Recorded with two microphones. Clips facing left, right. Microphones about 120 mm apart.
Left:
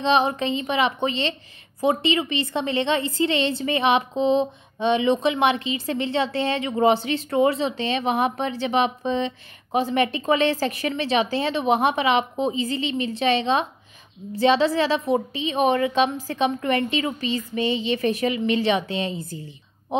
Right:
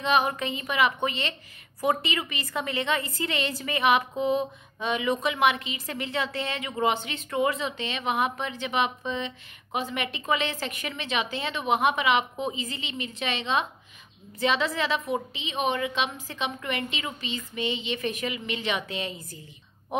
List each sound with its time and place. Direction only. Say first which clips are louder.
0.0 s a woman's voice: left 4 dB; 30° left (ahead or behind)